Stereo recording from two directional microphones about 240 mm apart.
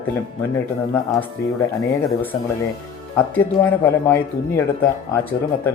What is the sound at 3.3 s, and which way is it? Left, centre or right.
Speech, centre.